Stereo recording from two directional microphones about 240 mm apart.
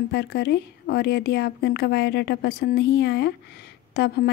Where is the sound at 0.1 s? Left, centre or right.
Left.